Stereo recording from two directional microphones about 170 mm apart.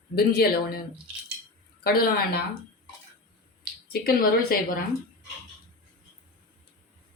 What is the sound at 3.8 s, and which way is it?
Speech, 60° left (ahead or behind).